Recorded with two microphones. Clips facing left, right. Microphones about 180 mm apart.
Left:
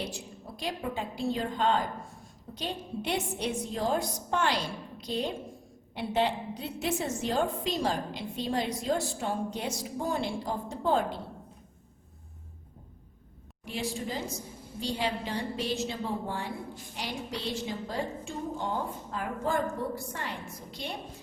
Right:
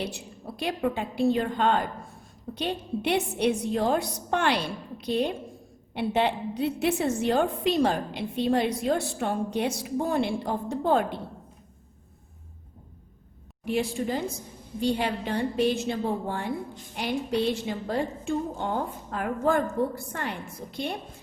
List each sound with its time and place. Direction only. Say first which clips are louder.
0.0 s a woman's voice: right 4 dB; 65° right (ahead or behind)
13.7 s a woman's voice: right 7 dB; 60° right (ahead or behind)